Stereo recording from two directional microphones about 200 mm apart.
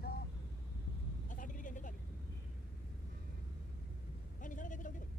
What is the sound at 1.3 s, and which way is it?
Vehicle, 40° left (ahead or behind).